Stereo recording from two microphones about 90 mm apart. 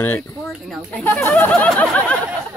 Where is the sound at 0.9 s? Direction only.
15° left (ahead or behind).